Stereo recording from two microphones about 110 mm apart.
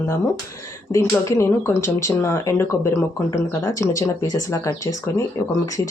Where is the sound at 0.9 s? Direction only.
25° left (ahead or behind).